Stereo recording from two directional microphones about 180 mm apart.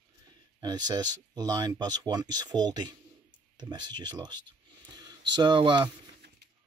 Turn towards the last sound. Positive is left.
turn(degrees=-25)  # may be behind; listen again after turning